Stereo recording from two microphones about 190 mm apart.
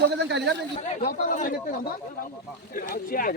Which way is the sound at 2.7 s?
50° left (ahead or behind).